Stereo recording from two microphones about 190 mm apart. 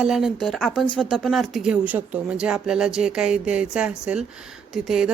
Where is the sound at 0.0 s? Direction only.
Centre (ahead or behind).